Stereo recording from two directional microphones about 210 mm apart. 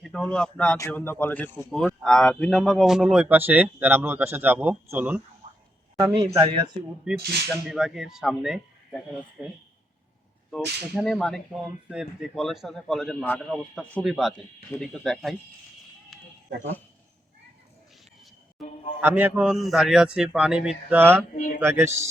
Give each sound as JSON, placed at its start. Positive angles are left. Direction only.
{"t": 0.0, "sound": "a man's voice", "side_deg": 5}
{"t": 6.1, "sound": "speech", "side_deg": -20}
{"t": 7.1, "sound": "speech", "side_deg": -5}
{"t": 10.5, "sound": "speech", "side_deg": 0}
{"t": 16.1, "sound": "a sound", "side_deg": 0}
{"t": 18.9, "sound": "speech", "side_deg": -10}
{"t": 21.3, "sound": "speech", "side_deg": 40}
{"t": 21.6, "sound": "speech", "side_deg": -10}